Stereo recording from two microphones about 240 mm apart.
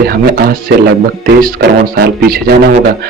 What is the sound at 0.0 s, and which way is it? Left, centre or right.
A man's voice, right.